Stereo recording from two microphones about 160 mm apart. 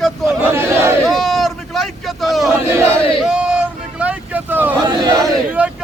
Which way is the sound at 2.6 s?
15° right (ahead or behind).